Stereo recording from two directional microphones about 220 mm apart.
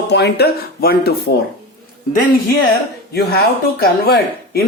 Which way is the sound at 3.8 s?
45° left (ahead or behind).